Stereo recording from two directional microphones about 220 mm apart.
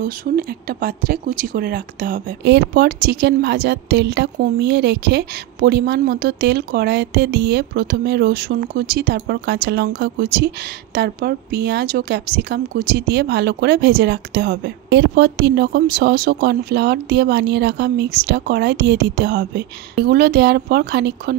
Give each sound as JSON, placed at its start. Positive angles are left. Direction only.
{"t": 0.0, "sound": "speech", "side_deg": -40}